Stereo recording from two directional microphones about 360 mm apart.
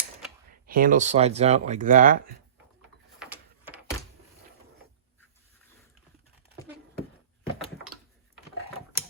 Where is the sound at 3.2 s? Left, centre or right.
Centre.